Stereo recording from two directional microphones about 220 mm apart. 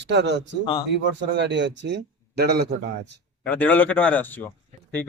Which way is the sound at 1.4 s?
55° right (ahead or behind).